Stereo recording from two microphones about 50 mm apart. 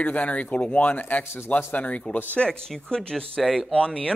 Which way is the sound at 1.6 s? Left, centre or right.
Left.